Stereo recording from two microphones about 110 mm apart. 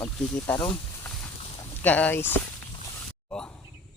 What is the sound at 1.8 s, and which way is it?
Speech, 15° left (ahead or behind).